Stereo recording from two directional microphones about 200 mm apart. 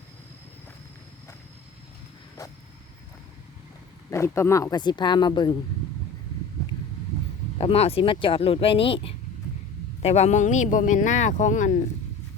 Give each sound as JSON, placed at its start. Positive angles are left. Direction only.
{"t": 4.1, "sound": "speech", "side_deg": 15}
{"t": 7.6, "sound": "speech", "side_deg": 30}